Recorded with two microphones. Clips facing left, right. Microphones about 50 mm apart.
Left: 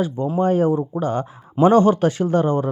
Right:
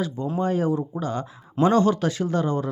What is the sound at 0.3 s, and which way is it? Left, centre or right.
Speech, left.